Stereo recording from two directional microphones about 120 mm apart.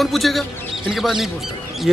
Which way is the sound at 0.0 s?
Centre (ahead or behind).